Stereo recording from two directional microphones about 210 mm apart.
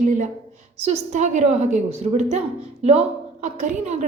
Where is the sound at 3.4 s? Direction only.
35° right (ahead or behind).